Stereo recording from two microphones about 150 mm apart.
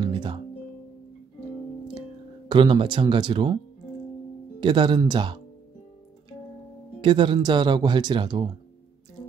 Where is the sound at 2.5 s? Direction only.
30° right (ahead or behind).